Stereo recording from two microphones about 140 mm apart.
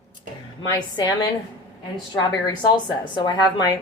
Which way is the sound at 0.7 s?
30° left (ahead or behind).